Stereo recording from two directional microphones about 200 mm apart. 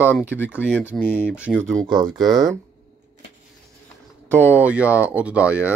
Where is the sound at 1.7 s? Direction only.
20° right (ahead or behind).